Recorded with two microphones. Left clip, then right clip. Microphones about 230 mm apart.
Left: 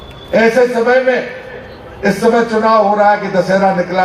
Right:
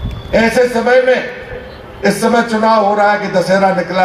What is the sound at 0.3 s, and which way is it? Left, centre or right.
Speech, right.